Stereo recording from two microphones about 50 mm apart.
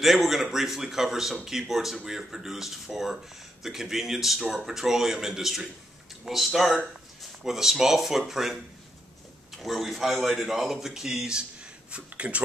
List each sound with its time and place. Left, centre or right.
0.0 s a man's voice: centre
9.6 s a man's voice: centre
11.9 s speech: right